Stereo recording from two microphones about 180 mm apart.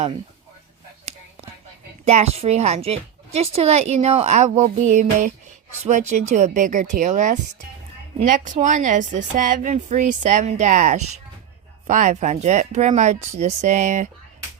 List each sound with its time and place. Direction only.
2.0 s a woman's voice: 35° right (ahead or behind)